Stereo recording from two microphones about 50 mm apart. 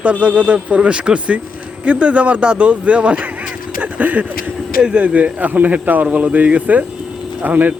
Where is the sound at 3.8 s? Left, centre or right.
Right.